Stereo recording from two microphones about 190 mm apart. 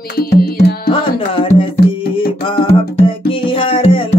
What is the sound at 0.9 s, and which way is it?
Music, 30° left (ahead or behind).